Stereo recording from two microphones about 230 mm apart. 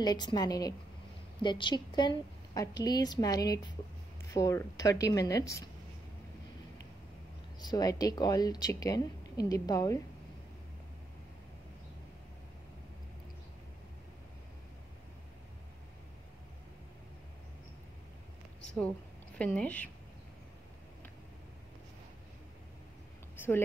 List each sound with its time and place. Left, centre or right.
0.0 s a woman's voice: centre
7.6 s a woman's voice: centre
19.3 s speech: centre